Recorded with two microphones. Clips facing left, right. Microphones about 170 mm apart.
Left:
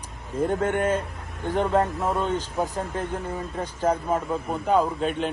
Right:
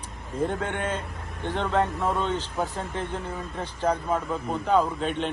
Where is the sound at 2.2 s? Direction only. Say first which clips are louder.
Left 2 dB; 10° left (ahead or behind).